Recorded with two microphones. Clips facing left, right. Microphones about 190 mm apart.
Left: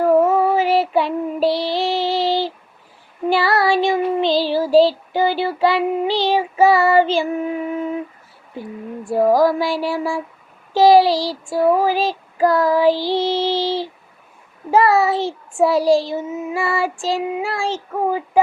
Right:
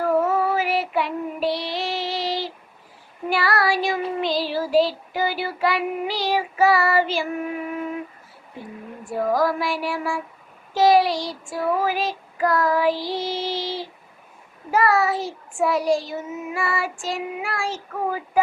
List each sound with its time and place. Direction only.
0.5 s child singing: 30° left (ahead or behind)
9.0 s child singing: 30° left (ahead or behind)